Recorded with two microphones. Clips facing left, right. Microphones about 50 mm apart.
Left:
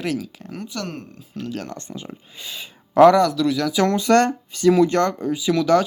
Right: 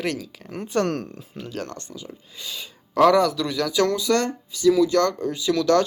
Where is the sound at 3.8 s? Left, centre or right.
Left.